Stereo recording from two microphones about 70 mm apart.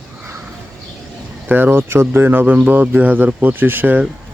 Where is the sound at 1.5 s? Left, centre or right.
Right.